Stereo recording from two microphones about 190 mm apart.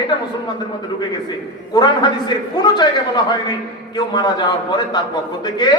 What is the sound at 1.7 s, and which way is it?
A man's voice, 20° left (ahead or behind).